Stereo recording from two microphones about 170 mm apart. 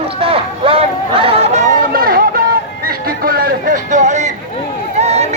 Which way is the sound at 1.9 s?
60° right (ahead or behind).